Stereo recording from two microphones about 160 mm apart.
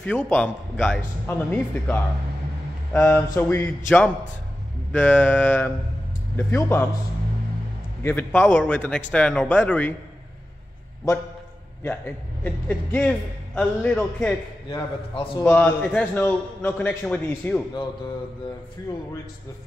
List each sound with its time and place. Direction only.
0.0 s speech: 5° left (ahead or behind)
8.0 s speech: 15° left (ahead or behind)
12.4 s speech: 10° left (ahead or behind)
14.7 s a man's voice: 25° left (ahead or behind)
15.4 s speech: 10° left (ahead or behind)